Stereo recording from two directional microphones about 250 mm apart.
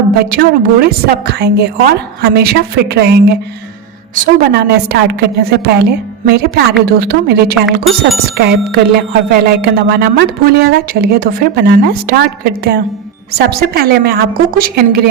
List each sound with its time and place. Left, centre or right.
0.3 s speech: right